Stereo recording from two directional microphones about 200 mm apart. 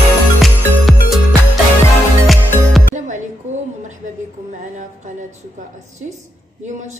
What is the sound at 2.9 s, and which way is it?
Music, 40° right (ahead or behind).